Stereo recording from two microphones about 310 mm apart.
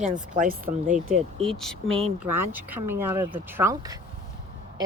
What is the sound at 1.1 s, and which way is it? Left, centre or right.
Speech, centre.